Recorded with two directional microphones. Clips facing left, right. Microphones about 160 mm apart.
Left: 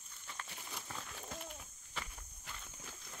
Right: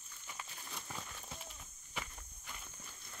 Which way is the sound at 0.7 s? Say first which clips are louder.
Even; centre (ahead or behind).